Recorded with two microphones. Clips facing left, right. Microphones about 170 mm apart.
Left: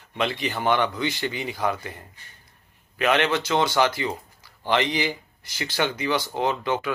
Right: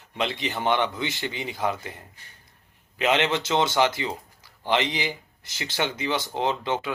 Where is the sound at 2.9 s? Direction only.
20° right (ahead or behind).